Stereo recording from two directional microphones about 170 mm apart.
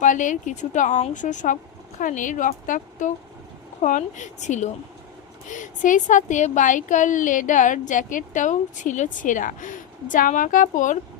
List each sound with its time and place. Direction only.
0.0 s speech: 50° left (ahead or behind)